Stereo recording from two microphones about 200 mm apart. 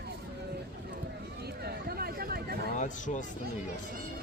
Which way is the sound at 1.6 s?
50° right (ahead or behind).